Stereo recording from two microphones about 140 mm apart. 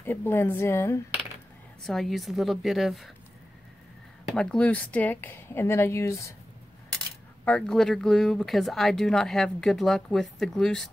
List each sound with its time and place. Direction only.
0.0 s speech: 15° left (ahead or behind)
1.8 s speech: centre (ahead or behind)
4.3 s speech: 5° left (ahead or behind)
7.4 s speech: 5° left (ahead or behind)